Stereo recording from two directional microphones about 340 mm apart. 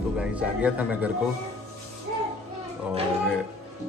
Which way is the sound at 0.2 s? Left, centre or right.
Centre.